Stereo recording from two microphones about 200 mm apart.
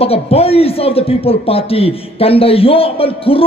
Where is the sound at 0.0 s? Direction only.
30° left (ahead or behind).